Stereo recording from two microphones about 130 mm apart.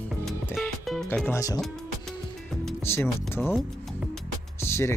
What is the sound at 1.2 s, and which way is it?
Speech, 25° left (ahead or behind).